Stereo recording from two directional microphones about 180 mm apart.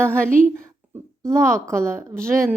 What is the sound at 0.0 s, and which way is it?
Speech, 5° left (ahead or behind).